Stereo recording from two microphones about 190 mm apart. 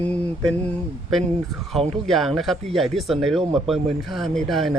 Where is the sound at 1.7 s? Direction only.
Centre (ahead or behind).